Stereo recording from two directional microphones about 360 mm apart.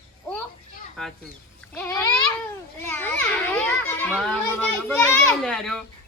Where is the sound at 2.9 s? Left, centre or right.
Centre.